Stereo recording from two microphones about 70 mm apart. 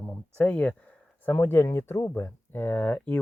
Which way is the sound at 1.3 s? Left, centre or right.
Left.